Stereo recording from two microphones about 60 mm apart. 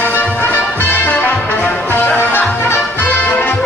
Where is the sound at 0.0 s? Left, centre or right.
Left.